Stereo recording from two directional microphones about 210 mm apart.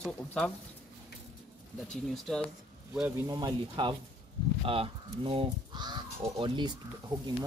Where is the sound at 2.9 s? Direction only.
10° right (ahead or behind).